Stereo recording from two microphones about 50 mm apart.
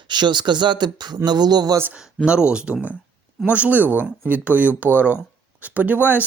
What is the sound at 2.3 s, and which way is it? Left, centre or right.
A man's voice, centre.